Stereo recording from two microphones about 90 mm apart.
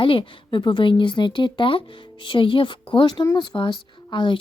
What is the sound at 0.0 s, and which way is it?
Speech, 80° left.